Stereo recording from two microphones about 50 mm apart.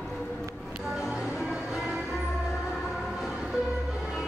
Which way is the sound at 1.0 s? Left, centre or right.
Centre.